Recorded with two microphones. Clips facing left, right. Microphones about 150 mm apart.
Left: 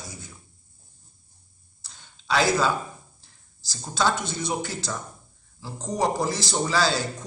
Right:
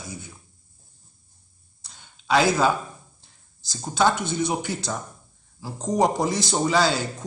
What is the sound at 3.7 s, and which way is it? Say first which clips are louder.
Speech: right 3 dB; 15° right (ahead or behind).